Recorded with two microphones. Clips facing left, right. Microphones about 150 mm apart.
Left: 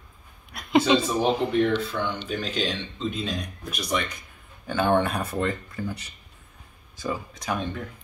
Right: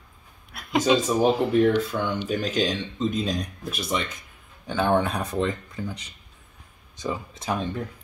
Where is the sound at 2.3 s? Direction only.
45° right (ahead or behind).